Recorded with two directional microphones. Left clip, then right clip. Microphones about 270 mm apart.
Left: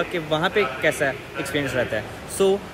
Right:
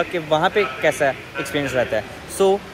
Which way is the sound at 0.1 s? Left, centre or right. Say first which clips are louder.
Right 4 dB; centre.